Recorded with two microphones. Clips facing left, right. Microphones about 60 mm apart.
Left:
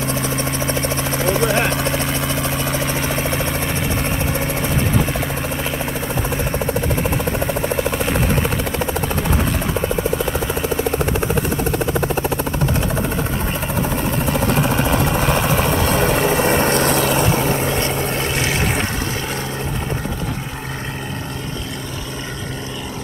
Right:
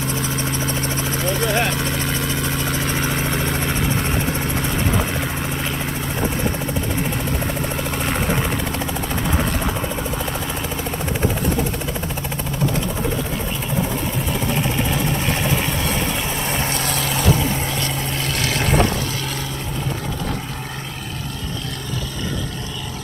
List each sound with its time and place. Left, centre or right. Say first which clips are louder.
2.0 s vehicle: left 2 dB; centre
7.9 s helicopter: left 3 dB; centre
14.3 s vehicle: left 4 dB; left
16.9 s vehicle: left 4 dB; left
18.3 s vehicle: left 1 dB; centre